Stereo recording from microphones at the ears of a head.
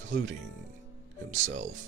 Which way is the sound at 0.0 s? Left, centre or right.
Right.